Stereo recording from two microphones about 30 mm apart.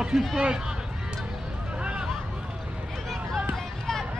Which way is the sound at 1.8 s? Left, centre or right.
Right.